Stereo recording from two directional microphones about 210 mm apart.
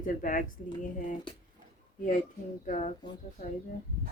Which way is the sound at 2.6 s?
35° left (ahead or behind).